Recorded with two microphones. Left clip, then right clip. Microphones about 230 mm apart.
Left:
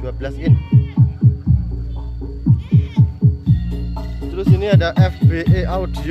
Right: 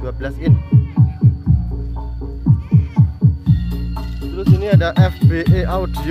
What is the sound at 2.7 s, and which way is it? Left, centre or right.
Hum, left.